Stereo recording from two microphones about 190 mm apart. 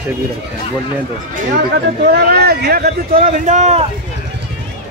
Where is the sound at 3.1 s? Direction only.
35° right (ahead or behind).